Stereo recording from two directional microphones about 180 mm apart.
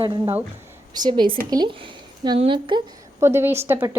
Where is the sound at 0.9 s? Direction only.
25° right (ahead or behind).